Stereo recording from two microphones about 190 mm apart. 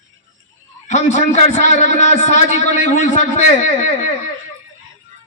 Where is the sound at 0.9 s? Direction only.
35° left (ahead or behind).